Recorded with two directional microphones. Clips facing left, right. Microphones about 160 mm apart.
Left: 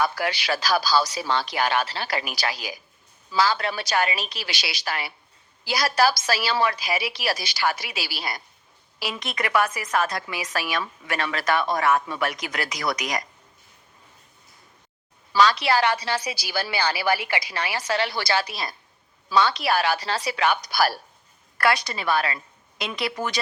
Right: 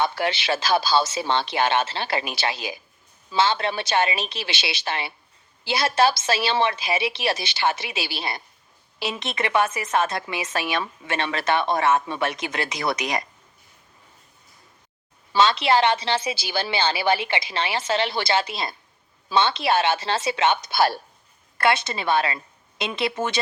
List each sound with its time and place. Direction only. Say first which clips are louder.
0.0 s a woman's voice: right 1 dB; 25° right (ahead or behind)
15.3 s a woman's voice: right 1 dB; 25° right (ahead or behind)